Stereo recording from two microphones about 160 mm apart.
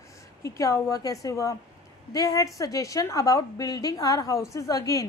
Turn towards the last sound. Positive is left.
turn(degrees=20)  # may be behind; listen again after turning